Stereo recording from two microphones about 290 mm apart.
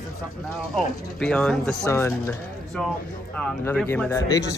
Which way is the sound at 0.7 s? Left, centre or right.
Centre.